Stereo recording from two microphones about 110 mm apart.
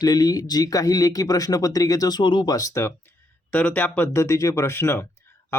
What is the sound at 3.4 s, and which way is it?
Speech, 15° left (ahead or behind).